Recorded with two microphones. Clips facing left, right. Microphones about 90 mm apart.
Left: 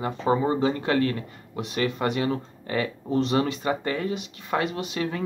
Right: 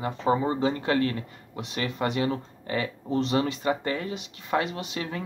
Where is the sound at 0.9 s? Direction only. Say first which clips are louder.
Left 1 dB; 25° right (ahead or behind).